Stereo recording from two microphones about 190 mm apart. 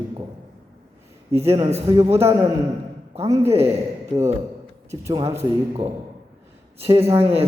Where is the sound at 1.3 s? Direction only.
15° right (ahead or behind).